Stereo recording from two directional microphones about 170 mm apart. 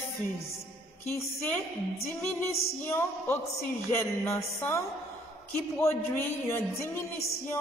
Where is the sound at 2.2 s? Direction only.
15° left (ahead or behind).